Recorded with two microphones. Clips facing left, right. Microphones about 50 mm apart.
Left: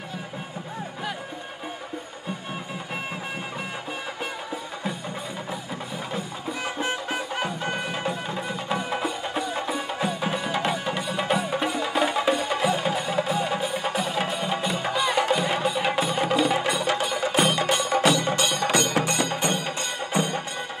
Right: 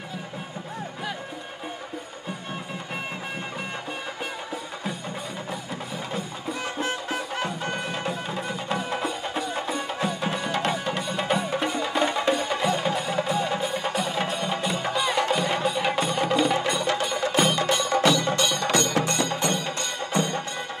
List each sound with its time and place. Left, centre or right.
6.6 s music: centre